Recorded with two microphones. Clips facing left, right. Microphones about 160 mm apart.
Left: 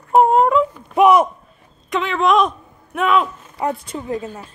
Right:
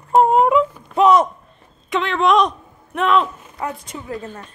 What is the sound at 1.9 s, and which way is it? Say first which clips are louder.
Speech: even; centre (ahead or behind).